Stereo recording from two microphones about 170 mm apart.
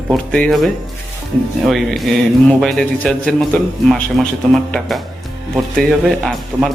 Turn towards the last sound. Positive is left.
turn(degrees=0)  # may be behind; listen again after turning